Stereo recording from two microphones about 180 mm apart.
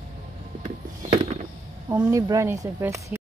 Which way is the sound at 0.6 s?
40° right (ahead or behind).